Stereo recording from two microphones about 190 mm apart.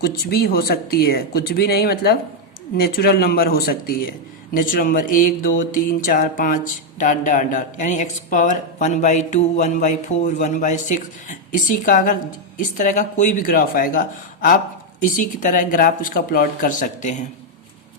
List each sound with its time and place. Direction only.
0.0 s speech: 55° left (ahead or behind); by 17.2 s 40° left (ahead or behind)